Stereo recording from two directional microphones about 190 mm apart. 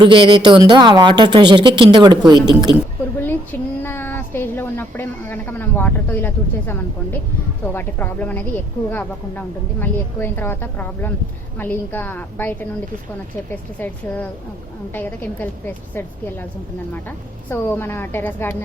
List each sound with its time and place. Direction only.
0.0 s speech: 25° right (ahead or behind)
3.2 s speech: 10° left (ahead or behind)